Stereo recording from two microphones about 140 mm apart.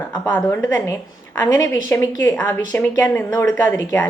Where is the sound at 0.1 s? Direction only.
15° left (ahead or behind).